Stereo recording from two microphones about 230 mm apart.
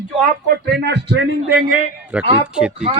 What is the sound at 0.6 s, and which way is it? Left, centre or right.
Speech, right.